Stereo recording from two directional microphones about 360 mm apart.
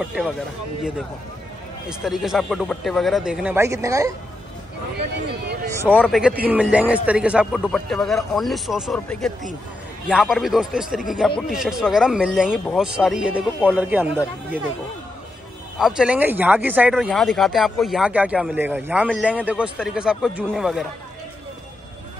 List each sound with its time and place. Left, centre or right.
0.0 s speech: centre
1.9 s speech: centre
5.7 s speech: centre
15.8 s speech: centre